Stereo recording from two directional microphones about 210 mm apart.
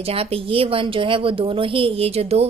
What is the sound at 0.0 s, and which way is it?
A woman's voice, 30° right (ahead or behind).